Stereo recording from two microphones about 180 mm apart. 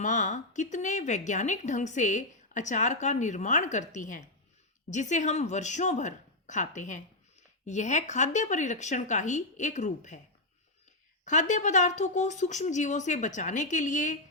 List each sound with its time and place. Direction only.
0.0 s a woman's voice: 45° left (ahead or behind)
11.3 s speech: 40° left (ahead or behind)